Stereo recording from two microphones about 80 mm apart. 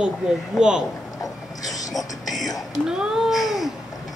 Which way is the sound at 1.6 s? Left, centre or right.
Left.